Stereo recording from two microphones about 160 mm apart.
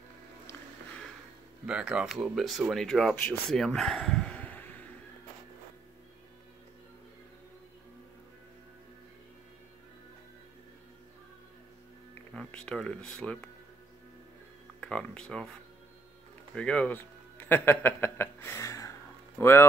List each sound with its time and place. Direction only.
1.7 s speech: 5° right (ahead or behind); by 4.6 s 10° left (ahead or behind)
12.4 s speech: 5° left (ahead or behind)
14.8 s speech: 5° left (ahead or behind)
16.5 s a man's voice: 5° left (ahead or behind)